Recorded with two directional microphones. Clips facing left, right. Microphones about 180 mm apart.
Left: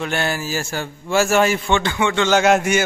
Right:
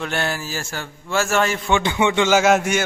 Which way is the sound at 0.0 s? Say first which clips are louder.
Left 2 dB; 5° left (ahead or behind).